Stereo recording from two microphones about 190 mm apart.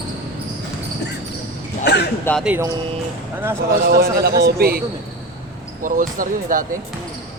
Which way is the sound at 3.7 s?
55° right (ahead or behind).